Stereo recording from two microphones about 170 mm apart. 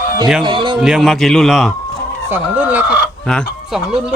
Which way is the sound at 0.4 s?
30° right (ahead or behind).